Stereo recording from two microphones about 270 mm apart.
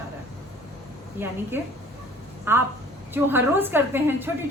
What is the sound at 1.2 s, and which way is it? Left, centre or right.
A woman's voice, centre.